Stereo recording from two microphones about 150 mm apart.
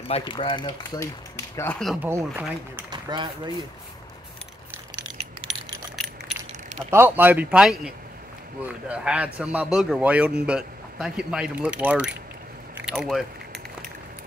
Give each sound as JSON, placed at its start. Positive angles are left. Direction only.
{"t": 0.1, "sound": "speech", "side_deg": 35}
{"t": 2.0, "sound": "a man's voice", "side_deg": -15}
{"t": 2.9, "sound": "a man's voice", "side_deg": -30}
{"t": 5.5, "sound": "coin", "side_deg": 0}
{"t": 6.9, "sound": "a man's voice", "side_deg": -15}
{"t": 12.7, "sound": "keys jangling", "side_deg": -5}